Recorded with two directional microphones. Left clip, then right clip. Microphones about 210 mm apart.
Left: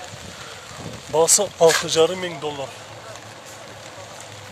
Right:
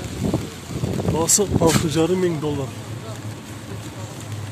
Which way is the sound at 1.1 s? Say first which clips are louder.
Left 4 dB; 20° left (ahead or behind).